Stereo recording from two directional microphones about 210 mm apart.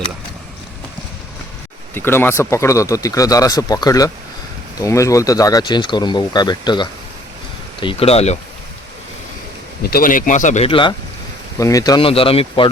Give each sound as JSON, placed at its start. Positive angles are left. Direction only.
{"t": 2.0, "sound": "speech", "side_deg": 10}
{"t": 9.8, "sound": "speech", "side_deg": 45}